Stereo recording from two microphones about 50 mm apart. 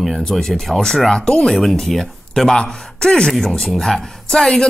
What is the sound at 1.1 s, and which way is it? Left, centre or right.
Speech, centre.